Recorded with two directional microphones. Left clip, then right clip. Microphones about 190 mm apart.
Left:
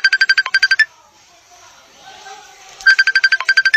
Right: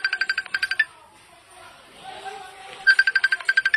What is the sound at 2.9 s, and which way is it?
Music, 45° left (ahead or behind).